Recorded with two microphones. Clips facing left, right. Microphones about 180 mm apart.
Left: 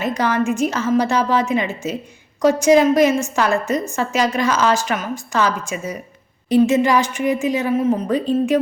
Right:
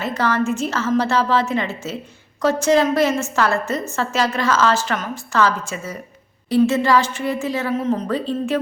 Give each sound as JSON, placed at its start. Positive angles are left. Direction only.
{"t": 0.0, "sound": "a woman's voice", "side_deg": 15}